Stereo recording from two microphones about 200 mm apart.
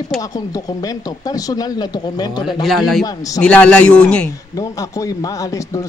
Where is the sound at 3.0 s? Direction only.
15° left (ahead or behind).